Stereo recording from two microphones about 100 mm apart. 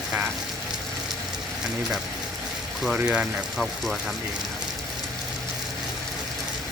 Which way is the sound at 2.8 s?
5° right (ahead or behind).